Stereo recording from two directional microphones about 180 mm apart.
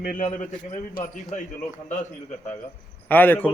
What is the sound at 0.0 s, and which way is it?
Speech, 50° left (ahead or behind).